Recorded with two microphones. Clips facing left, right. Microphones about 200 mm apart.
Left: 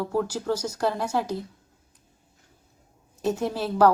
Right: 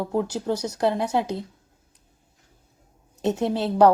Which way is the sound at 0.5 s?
65° right (ahead or behind).